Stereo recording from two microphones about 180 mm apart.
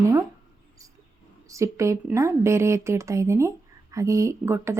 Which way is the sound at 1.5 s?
15° right (ahead or behind).